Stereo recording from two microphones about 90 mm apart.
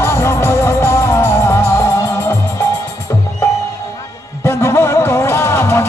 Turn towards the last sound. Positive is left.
turn(degrees=30)  # may be behind; listen again after turning